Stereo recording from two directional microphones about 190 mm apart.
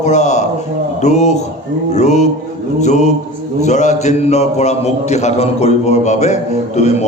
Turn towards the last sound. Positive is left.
turn(degrees=35)  # may be behind; listen again after turning